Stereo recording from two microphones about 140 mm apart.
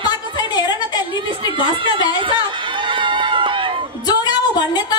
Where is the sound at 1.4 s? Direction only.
40° right (ahead or behind).